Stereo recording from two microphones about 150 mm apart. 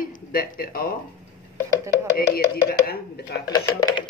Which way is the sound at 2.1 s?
90° left.